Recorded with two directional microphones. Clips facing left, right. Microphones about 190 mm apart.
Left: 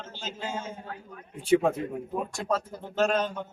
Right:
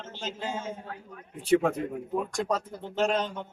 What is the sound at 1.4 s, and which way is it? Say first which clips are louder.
Speech: left 1 dB; centre (ahead or behind).